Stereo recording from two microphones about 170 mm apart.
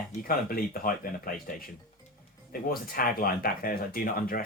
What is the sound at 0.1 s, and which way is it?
Speech, 60° left (ahead or behind).